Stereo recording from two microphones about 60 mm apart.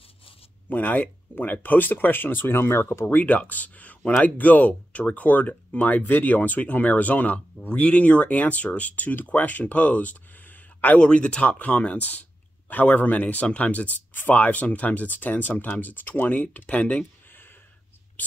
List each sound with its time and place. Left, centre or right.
0.7 s speech: left
3.1 s speech: left